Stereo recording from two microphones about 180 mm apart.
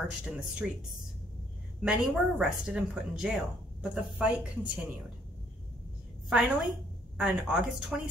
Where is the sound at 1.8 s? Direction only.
Centre (ahead or behind).